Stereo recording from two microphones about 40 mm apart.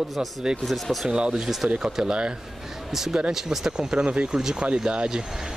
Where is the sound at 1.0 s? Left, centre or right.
Right.